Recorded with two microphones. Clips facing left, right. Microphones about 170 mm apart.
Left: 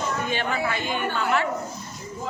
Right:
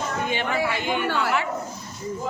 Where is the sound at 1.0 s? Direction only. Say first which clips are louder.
Right 2 dB; 90° right.